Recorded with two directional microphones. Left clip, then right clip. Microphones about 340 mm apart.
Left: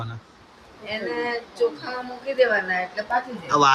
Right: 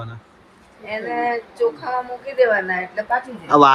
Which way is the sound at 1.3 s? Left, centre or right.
Centre.